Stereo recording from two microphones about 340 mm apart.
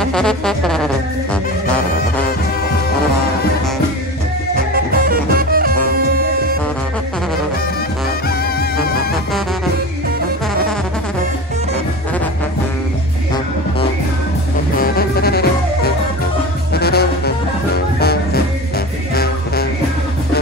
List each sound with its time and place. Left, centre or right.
0.0 s music: centre
4.7 s music: right
8.3 s music: left
14.8 s music: left